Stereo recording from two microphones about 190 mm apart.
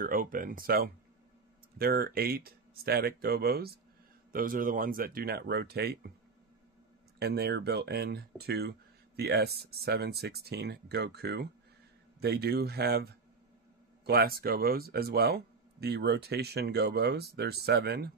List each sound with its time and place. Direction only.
0.0 s speech: 45° right (ahead or behind)
7.2 s speech: 55° right (ahead or behind)